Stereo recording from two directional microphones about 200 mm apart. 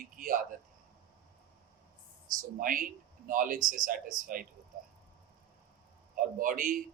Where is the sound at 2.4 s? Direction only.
45° right (ahead or behind).